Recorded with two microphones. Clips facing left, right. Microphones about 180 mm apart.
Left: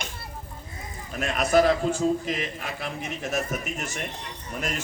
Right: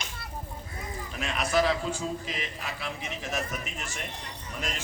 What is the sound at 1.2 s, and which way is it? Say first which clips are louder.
A man's voice: left 6 dB; 45° left (ahead or behind).